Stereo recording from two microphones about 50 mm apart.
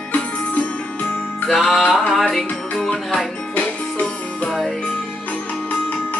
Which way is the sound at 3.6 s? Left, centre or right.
Left.